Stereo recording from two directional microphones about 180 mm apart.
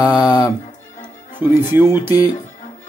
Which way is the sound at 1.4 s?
10° right (ahead or behind).